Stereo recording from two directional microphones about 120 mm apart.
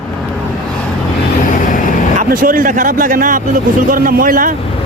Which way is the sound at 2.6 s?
90° right.